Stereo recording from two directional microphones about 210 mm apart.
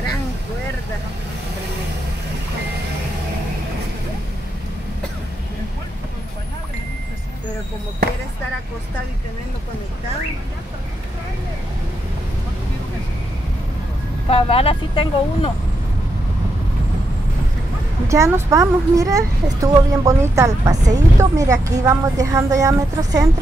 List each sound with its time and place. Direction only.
14.3 s speech: 25° left (ahead or behind)
18.0 s a child's voice: 15° right (ahead or behind)